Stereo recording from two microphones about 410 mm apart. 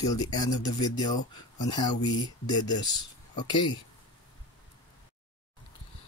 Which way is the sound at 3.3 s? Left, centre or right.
Centre.